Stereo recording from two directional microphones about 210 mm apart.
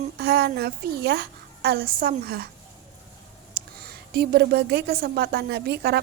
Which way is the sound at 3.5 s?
50° right (ahead or behind).